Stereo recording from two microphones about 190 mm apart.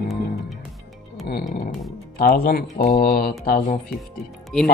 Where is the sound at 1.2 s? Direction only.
50° left (ahead or behind).